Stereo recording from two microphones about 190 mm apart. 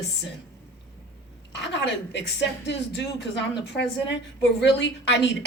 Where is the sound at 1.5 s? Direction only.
70° left (ahead or behind).